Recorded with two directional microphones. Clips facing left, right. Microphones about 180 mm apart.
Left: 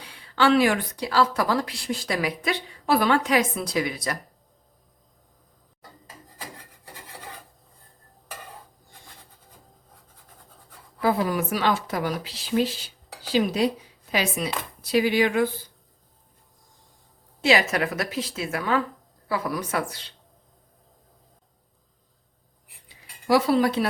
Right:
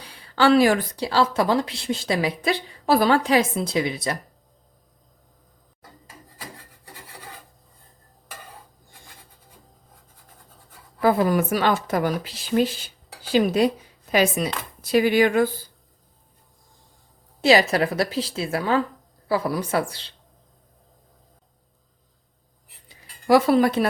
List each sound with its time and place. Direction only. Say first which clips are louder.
0.0 s a woman's voice: right 2 dB; 40° right (ahead or behind)
11.0 s speech: right 4 dB; 50° right (ahead or behind)
17.4 s a woman's voice: right 4 dB; 35° right (ahead or behind)
23.2 s speech: right 3 dB; 50° right (ahead or behind)